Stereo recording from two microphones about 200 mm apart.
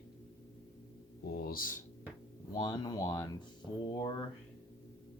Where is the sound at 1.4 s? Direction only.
45° left (ahead or behind).